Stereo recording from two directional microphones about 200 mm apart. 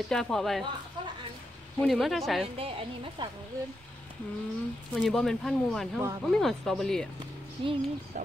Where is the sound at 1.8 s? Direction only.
Centre (ahead or behind).